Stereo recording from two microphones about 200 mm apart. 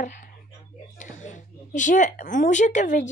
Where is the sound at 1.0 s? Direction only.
40° left (ahead or behind).